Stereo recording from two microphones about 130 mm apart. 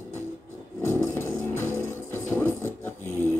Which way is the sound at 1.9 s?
20° left (ahead or behind).